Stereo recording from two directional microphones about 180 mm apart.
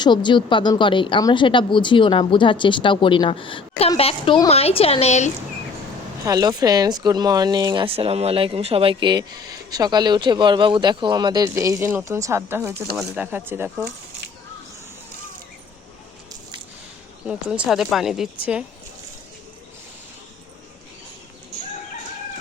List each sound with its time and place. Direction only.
0.0 s speech: 25° left (ahead or behind)
6.2 s speech: 20° right (ahead or behind)
17.2 s speech: 5° right (ahead or behind)